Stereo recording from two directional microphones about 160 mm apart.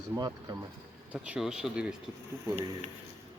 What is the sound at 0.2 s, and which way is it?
Speech, 25° right (ahead or behind).